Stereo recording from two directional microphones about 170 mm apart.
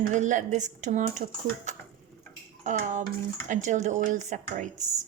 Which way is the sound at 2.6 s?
45° right (ahead or behind).